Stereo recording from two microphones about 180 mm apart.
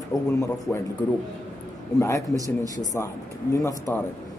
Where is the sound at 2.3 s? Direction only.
20° right (ahead or behind).